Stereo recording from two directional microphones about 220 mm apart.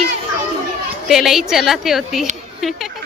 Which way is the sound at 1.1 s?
Centre (ahead or behind).